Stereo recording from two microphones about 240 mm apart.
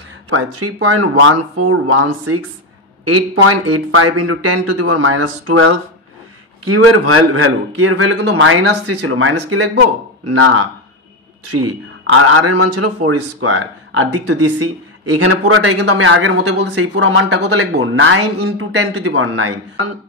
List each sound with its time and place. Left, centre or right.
0.3 s a woman's voice: right